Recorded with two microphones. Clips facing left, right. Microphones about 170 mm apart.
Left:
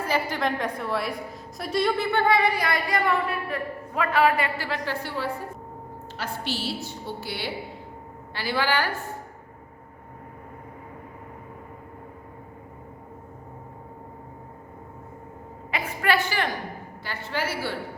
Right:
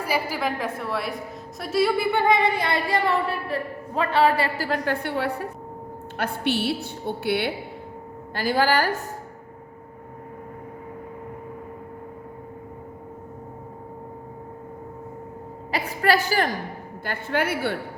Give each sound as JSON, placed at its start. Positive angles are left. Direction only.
{"t": 0.0, "sound": "a woman's voice", "side_deg": -10}
{"t": 8.3, "sound": "a woman's voice", "side_deg": -45}
{"t": 15.7, "sound": "a sound", "side_deg": -40}
{"t": 17.0, "sound": "a woman's voice", "side_deg": -50}